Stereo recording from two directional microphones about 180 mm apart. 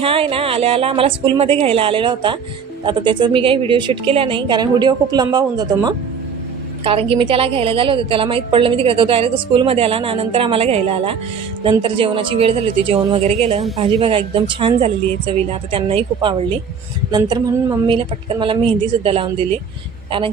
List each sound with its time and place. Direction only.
0.0 s a woman's voice: 30° right (ahead or behind)